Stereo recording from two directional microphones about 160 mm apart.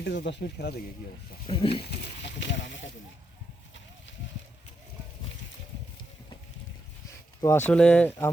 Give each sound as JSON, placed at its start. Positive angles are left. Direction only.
{"t": 0.0, "sound": "speech", "side_deg": 90}
{"t": 1.5, "sound": "a sound", "side_deg": 35}
{"t": 1.7, "sound": "speech", "side_deg": 90}
{"t": 7.4, "sound": "speech", "side_deg": 15}